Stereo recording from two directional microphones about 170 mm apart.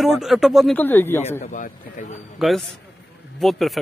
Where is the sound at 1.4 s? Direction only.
50° left (ahead or behind).